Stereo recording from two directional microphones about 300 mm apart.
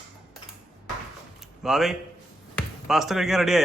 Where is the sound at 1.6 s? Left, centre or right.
Centre.